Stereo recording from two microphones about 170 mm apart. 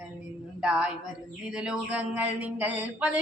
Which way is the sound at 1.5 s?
5° right (ahead or behind).